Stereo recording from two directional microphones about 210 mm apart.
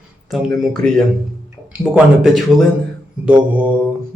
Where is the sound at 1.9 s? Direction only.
Centre (ahead or behind).